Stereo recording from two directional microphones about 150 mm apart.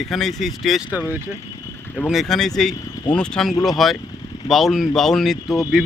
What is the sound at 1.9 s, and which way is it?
Speech, 5° left (ahead or behind).